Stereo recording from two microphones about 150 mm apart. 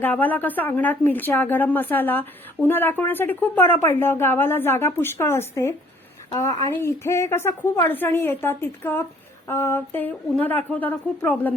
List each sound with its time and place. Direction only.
0.0 s a woman's voice: 10° left (ahead or behind)